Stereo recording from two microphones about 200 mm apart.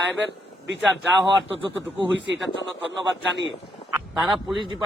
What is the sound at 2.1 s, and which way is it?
Speech, 65° right (ahead or behind).